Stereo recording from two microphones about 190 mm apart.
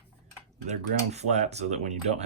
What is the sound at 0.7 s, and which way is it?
Speech, 35° right (ahead or behind).